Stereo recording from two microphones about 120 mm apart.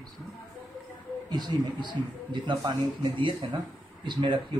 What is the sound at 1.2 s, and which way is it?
Speech, 35° right (ahead or behind).